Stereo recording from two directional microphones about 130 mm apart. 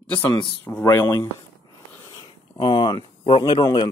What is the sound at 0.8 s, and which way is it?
Speech, 25° left (ahead or behind).